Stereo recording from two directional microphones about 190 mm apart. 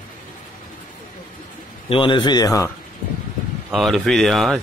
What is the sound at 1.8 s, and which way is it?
Speech, 25° left (ahead or behind).